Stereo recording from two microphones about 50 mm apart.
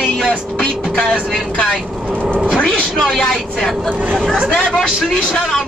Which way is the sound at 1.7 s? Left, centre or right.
Centre.